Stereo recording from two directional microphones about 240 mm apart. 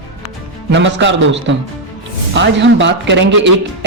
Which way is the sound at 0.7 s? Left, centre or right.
Right.